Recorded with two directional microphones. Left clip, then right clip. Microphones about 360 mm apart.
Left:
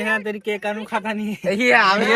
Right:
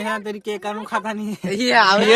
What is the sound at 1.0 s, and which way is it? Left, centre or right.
Speech, centre.